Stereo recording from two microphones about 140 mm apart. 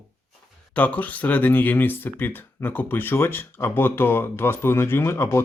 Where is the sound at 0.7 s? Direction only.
10° left (ahead or behind).